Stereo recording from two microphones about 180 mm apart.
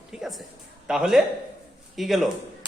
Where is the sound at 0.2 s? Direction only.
Centre (ahead or behind).